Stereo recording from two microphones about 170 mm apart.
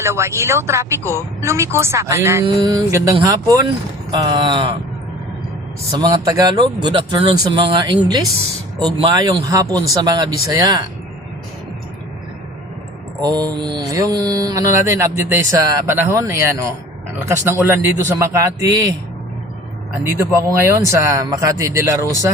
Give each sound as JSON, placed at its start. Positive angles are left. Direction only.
{"t": 0.0, "sound": "speech", "side_deg": -15}
{"t": 2.6, "sound": "mantra", "side_deg": -25}
{"t": 5.9, "sound": "mantra", "side_deg": -25}
{"t": 13.2, "sound": "mantra", "side_deg": -25}
{"t": 17.2, "sound": "speech", "side_deg": -15}
{"t": 20.1, "sound": "speech", "side_deg": -15}